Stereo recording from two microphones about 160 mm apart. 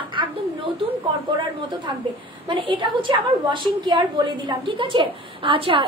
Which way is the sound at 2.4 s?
30° right (ahead or behind).